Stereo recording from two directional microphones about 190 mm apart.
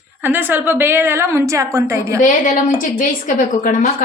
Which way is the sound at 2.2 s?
45° left (ahead or behind).